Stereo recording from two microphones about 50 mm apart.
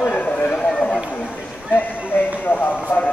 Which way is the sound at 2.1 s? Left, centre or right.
Left.